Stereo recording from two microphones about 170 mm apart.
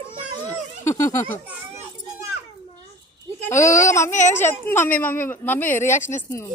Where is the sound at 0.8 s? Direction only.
15° left (ahead or behind).